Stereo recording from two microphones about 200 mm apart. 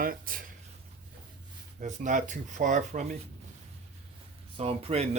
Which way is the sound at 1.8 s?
40° right (ahead or behind).